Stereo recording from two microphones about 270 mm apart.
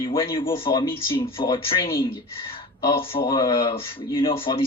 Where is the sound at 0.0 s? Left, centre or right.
Centre.